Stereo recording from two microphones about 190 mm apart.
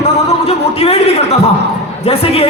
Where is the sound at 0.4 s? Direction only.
30° left (ahead or behind).